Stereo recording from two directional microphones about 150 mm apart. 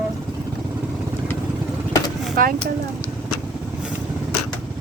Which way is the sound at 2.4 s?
70° right (ahead or behind).